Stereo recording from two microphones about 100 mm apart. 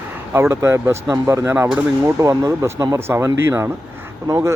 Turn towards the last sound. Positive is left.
turn(degrees=-30)  # may be behind; listen again after turning